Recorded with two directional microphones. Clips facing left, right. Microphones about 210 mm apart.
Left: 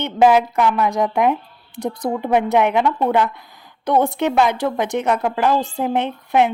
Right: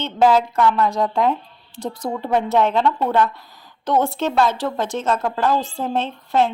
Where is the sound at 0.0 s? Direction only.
15° left (ahead or behind).